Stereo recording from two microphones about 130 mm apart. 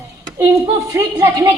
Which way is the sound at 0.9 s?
25° right (ahead or behind).